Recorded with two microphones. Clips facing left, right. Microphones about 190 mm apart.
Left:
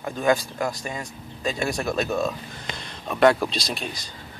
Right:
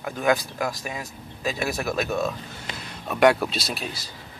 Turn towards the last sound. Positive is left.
turn(degrees=-5)  # may be behind; listen again after turning